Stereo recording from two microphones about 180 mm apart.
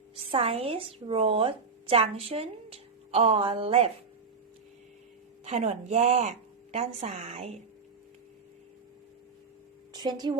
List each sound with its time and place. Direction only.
0.3 s speech: 35° right (ahead or behind)
5.5 s speech: 40° right (ahead or behind)
9.9 s a woman's voice: 25° right (ahead or behind)